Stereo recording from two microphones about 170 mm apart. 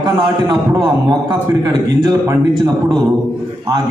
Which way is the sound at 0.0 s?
25° right (ahead or behind).